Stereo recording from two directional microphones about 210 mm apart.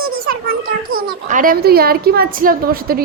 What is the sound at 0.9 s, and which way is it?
A woman's voice, 40° right (ahead or behind).